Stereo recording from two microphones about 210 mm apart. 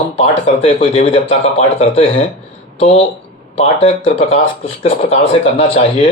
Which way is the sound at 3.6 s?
30° left (ahead or behind).